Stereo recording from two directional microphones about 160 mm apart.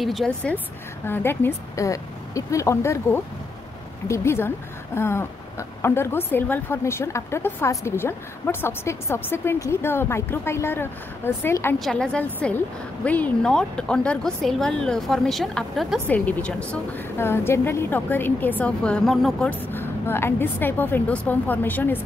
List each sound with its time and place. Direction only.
0.0 s a woman's voice: centre (ahead or behind)
11.8 s a woman's voice: 5° left (ahead or behind)
19.7 s a woman's voice: 15° left (ahead or behind)